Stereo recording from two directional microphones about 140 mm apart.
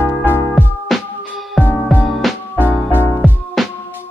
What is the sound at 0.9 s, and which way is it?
Music, centre (ahead or behind).